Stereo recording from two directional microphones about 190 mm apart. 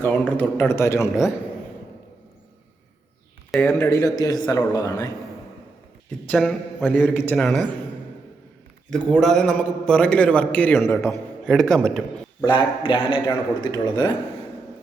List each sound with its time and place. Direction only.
0.0 s a man's voice: 10° left (ahead or behind)
3.5 s a man's voice: 10° left (ahead or behind)
6.1 s a man's voice: 5° left (ahead or behind)
7.0 s a man's voice: 10° left (ahead or behind)
8.9 s a man's voice: 5° left (ahead or behind)
12.5 s a man's voice: 25° left (ahead or behind)